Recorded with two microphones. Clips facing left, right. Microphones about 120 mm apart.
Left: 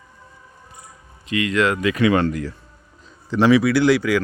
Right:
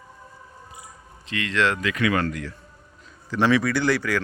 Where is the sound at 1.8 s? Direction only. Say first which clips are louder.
Left 6 dB; 25° left (ahead or behind).